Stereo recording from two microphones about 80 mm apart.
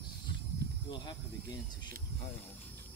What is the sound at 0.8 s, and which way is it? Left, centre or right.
Speech, left.